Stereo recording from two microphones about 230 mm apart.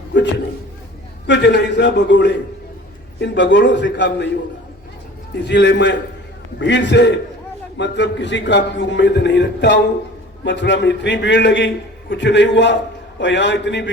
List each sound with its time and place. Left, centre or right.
0.1 s a man's voice: left
1.3 s a man's voice: left
5.4 s a man's voice: left